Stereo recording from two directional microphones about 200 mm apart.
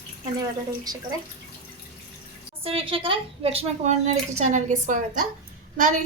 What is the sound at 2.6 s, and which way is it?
A woman's voice, 25° right (ahead or behind).